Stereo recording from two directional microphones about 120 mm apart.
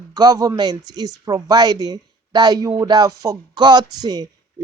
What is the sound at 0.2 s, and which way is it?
Speech, 30° right (ahead or behind).